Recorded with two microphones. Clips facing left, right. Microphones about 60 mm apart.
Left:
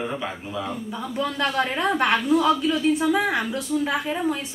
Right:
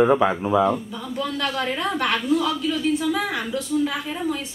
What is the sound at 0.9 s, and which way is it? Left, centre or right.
A woman's voice, left.